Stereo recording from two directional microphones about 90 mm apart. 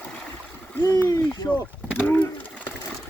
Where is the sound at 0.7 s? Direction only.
25° left (ahead or behind).